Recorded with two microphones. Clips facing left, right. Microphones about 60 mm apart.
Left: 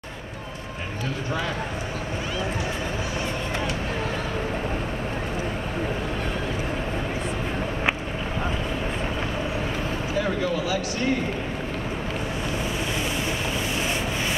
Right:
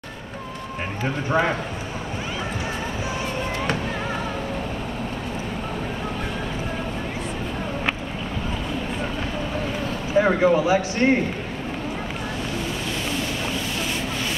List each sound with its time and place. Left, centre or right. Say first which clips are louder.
1.0 s speech: right 7 dB; right
10.1 s speech: right 9 dB; right
11.0 s speech: right 6 dB; right